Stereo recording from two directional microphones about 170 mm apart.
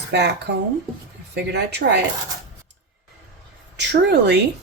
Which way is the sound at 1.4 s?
80° right.